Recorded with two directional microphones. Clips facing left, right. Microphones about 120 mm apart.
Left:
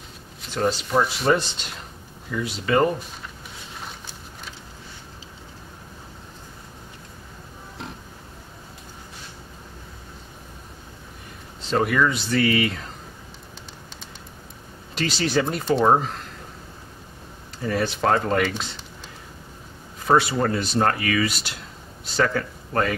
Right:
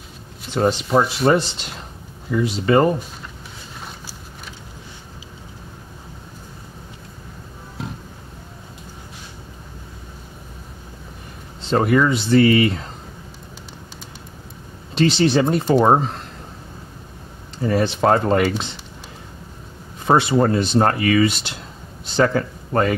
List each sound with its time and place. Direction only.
0.6 s speech: 25° right (ahead or behind)
1.3 s speech: 45° right (ahead or behind)
2.3 s speech: 30° right (ahead or behind)
11.7 s speech: 25° right (ahead or behind)
15.0 s speech: 25° right (ahead or behind)
17.6 s speech: 25° right (ahead or behind)
20.1 s speech: 25° right (ahead or behind)